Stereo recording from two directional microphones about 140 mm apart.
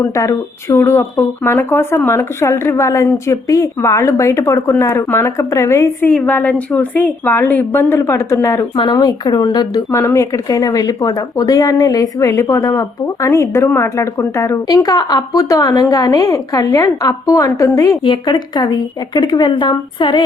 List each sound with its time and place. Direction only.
0.0 s a woman's voice: 20° left (ahead or behind)
8.7 s a woman's voice: 30° left (ahead or behind)